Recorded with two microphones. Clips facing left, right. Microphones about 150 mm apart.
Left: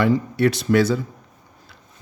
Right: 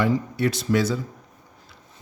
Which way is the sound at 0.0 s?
65° left (ahead or behind).